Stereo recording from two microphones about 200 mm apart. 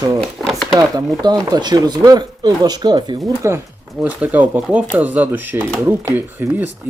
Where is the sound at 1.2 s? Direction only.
20° right (ahead or behind).